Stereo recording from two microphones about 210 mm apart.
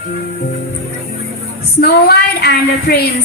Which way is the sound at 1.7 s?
50° left (ahead or behind).